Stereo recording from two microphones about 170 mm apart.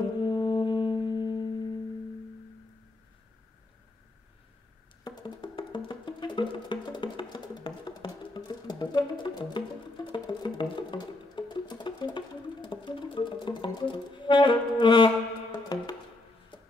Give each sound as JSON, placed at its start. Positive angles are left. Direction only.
{"t": 0.0, "sound": "music", "side_deg": 25}
{"t": 5.0, "sound": "music", "side_deg": 25}